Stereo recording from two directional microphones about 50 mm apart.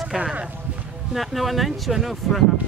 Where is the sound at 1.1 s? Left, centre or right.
Centre.